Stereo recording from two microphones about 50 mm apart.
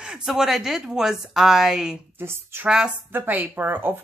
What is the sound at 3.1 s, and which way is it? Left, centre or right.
Speech, right.